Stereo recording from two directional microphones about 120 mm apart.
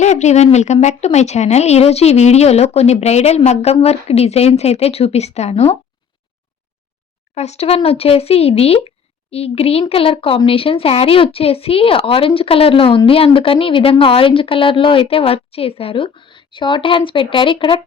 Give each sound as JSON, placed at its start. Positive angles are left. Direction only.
{"t": 0.0, "sound": "speech", "side_deg": 70}
{"t": 7.3, "sound": "a woman's voice", "side_deg": 65}